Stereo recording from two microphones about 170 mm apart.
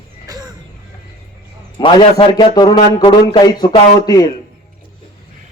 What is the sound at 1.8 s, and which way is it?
A man's voice, 30° left (ahead or behind).